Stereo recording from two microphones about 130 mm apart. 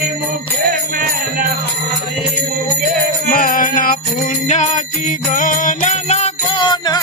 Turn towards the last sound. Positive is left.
turn(degrees=35)  # may be behind; listen again after turning